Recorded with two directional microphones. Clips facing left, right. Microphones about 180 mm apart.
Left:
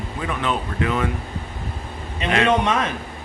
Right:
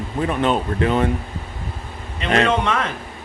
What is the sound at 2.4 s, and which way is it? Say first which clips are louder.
Speech: left 1 dB; 15° left (ahead or behind).